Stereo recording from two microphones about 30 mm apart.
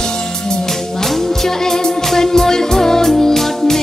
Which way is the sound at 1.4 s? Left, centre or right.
Centre.